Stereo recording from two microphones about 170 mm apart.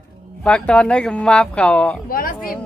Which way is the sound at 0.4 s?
5° left (ahead or behind).